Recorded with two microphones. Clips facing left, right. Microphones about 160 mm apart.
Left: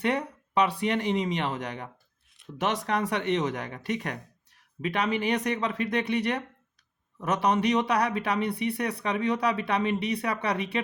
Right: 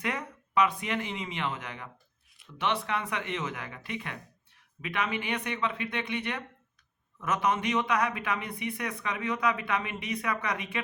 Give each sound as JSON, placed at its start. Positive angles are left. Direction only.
{"t": 0.0, "sound": "speech", "side_deg": 35}